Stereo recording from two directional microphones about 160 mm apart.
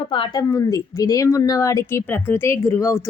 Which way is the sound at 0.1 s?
30° left (ahead or behind).